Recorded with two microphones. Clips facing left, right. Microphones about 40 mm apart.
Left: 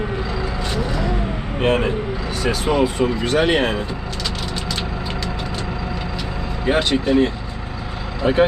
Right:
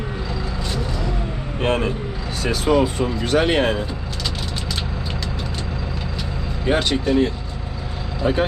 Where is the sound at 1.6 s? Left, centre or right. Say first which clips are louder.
Left 2 dB; left.